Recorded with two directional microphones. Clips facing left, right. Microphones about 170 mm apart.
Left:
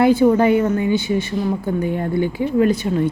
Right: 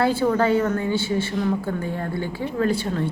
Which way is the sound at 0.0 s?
15° left (ahead or behind).